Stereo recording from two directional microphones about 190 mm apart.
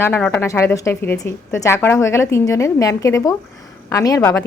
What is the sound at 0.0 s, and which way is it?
A woman's voice, 10° left (ahead or behind).